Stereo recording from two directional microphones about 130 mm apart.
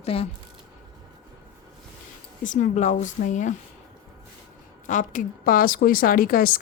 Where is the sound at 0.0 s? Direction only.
50° left (ahead or behind).